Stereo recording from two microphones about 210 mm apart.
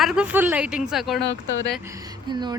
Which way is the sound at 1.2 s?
55° left (ahead or behind).